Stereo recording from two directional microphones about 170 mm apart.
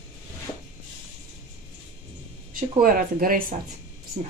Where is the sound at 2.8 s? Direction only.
55° right (ahead or behind).